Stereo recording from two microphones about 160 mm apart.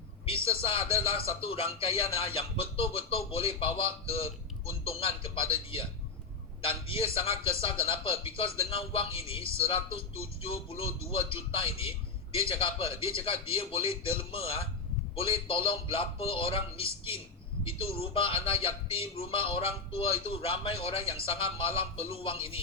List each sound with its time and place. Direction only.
0.3 s speech: 35° left (ahead or behind)